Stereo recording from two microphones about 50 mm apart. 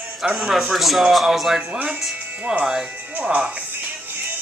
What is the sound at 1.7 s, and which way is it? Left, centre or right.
Speech, right.